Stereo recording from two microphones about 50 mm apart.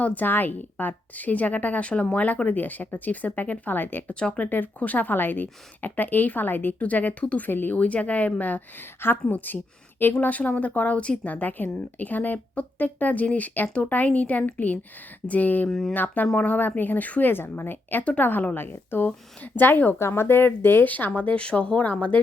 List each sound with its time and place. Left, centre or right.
0.0 s speech: left
4.1 s speech: left
4.4 s speech: left
7.8 s a woman's voice: left
20.0 s a woman's voice: left
20.8 s speech: left